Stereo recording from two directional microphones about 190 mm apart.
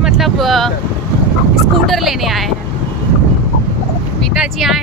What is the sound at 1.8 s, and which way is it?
Speech, centre (ahead or behind).